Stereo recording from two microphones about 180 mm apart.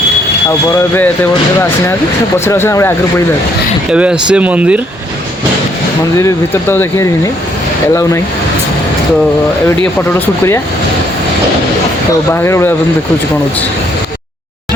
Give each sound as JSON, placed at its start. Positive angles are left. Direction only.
{"t": 2.4, "sound": "speech", "side_deg": 15}
{"t": 3.8, "sound": "speech", "side_deg": -5}
{"t": 6.1, "sound": "speech", "side_deg": 15}
{"t": 12.3, "sound": "speech", "side_deg": 15}